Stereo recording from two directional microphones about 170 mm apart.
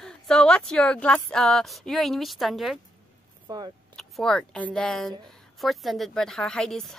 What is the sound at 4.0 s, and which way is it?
A woman's voice, 5° left (ahead or behind).